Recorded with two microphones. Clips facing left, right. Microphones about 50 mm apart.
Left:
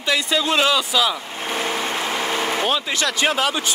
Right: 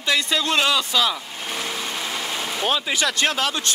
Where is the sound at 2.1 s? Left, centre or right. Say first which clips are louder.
Left 5 dB; left.